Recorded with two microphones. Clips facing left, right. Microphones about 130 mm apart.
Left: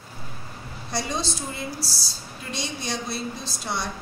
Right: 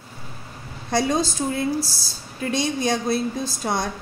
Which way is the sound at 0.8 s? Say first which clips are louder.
Right 7 dB; 50° right (ahead or behind).